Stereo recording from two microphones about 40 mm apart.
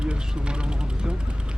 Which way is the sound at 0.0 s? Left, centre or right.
Right.